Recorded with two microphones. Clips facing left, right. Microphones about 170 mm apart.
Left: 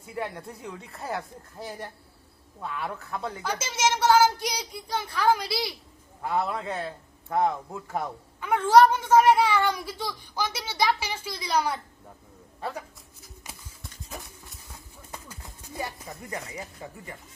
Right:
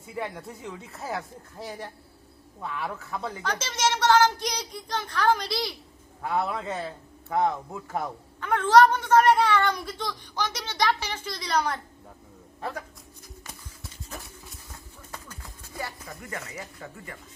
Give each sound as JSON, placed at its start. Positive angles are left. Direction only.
{"t": 0.0, "sound": "a man's voice", "side_deg": 0}
{"t": 15.1, "sound": "a sound", "side_deg": 20}
{"t": 16.5, "sound": "speech", "side_deg": 25}